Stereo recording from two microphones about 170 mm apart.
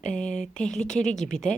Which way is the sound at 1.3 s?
5° left (ahead or behind).